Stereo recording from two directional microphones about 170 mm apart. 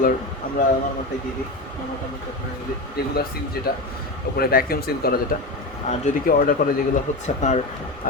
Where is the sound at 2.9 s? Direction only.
65° left (ahead or behind).